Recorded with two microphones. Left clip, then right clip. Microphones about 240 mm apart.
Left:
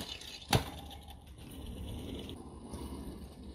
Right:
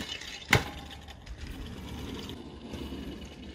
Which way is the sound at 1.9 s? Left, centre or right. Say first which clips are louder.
Right 4 dB; centre.